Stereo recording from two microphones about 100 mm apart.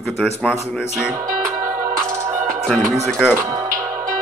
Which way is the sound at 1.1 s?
30° right (ahead or behind).